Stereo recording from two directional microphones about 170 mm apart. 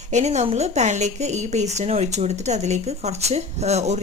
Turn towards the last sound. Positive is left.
turn(degrees=-40)  # may be behind; listen again after turning